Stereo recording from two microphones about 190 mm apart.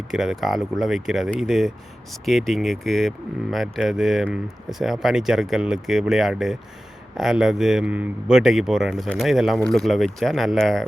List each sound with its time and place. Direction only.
0.1 s speech: centre (ahead or behind)